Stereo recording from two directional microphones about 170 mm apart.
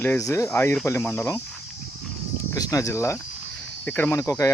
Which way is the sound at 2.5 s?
20° left (ahead or behind).